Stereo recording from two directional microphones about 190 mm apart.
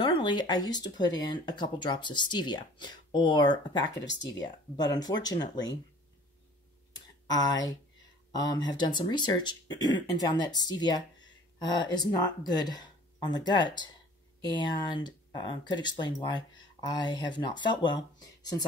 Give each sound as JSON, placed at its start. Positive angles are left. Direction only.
{"t": 0.0, "sound": "speech", "side_deg": 25}
{"t": 4.0, "sound": "speech", "side_deg": 70}
{"t": 4.7, "sound": "speech", "side_deg": 20}
{"t": 7.4, "sound": "speech", "side_deg": 20}
{"t": 8.7, "sound": "speech", "side_deg": 25}